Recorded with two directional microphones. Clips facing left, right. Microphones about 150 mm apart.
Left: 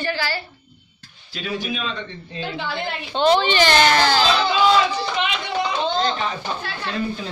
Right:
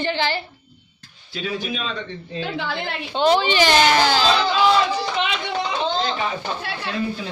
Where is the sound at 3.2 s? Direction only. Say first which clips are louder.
Even; 10° right (ahead or behind).